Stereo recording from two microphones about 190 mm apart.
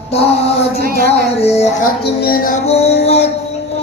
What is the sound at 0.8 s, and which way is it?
Speech, 50° right (ahead or behind).